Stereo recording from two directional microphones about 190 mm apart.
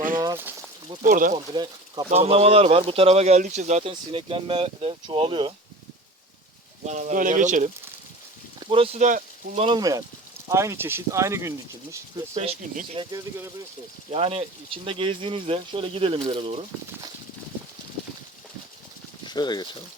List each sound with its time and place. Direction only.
0.2 s a sound: 20° right (ahead or behind)
1.0 s speech: 45° right (ahead or behind)
2.0 s speech: 30° right (ahead or behind)
6.8 s speech: 40° right (ahead or behind)
8.5 s speech: 30° right (ahead or behind)
9.6 s speech: 20° right (ahead or behind)
12.3 s speech: 35° right (ahead or behind)
13.1 s speech: 20° right (ahead or behind)
14.1 s speech: 30° right (ahead or behind)
19.2 s speech: 20° left (ahead or behind)